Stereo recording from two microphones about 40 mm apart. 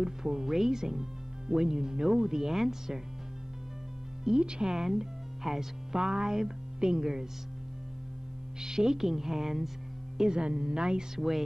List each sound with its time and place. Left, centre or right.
0.0 s speech: centre
4.2 s speech: centre
8.5 s speech: centre
10.1 s a woman's voice: centre
11.1 s speech: centre